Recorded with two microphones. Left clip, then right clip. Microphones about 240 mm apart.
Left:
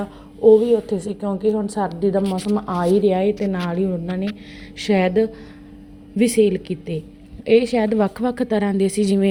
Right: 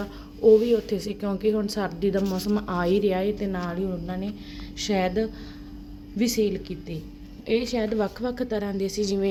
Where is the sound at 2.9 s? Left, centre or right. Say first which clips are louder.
Left 7 dB; centre.